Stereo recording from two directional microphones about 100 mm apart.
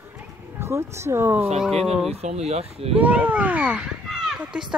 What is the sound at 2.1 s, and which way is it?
Speech, 90° right.